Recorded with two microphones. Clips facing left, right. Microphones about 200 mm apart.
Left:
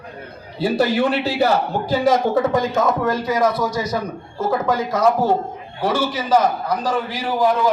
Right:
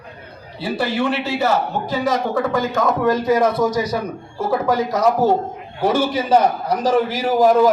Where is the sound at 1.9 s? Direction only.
25° left (ahead or behind).